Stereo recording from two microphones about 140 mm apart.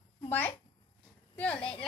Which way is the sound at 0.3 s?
15° left (ahead or behind).